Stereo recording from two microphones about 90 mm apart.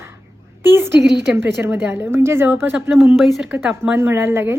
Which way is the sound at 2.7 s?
5° right (ahead or behind).